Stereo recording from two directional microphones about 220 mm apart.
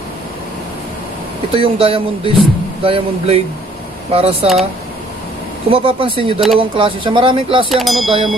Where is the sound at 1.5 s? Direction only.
25° right (ahead or behind).